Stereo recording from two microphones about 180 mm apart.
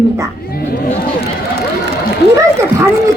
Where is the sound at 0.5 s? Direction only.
55° left (ahead or behind).